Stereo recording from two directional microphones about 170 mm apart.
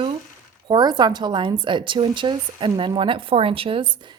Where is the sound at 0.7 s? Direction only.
25° right (ahead or behind).